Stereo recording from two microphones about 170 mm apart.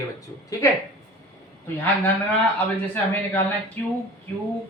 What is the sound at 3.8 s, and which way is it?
Speech, 10° left (ahead or behind).